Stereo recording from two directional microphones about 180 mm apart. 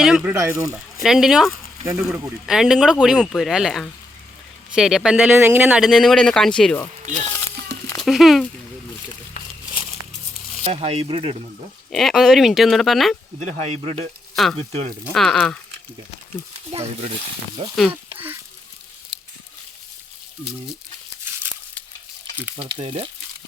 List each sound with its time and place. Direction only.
0.0 s speech: 5° right (ahead or behind)
0.3 s speech: 15° right (ahead or behind)
1.0 s speech: 5° right (ahead or behind)
1.8 s speech: 15° right (ahead or behind)
2.5 s speech: 5° right (ahead or behind)
7.9 s speech: centre (ahead or behind)
10.6 s speech: 35° right (ahead or behind)
11.9 s speech: centre (ahead or behind)
13.4 s speech: 40° right (ahead or behind)
15.1 s speech: centre (ahead or behind)
16.7 s speech: 35° right (ahead or behind)
21.2 s crumpling: 10° right (ahead or behind)
22.5 s speech: 30° right (ahead or behind)